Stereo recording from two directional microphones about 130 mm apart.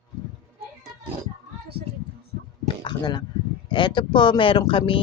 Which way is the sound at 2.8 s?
35° left (ahead or behind).